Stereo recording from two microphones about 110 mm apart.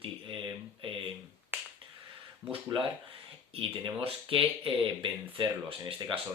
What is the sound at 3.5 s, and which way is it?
Speech, 55° right (ahead or behind).